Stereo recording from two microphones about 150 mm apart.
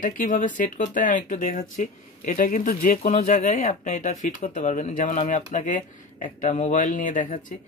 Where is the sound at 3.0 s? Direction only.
50° left (ahead or behind).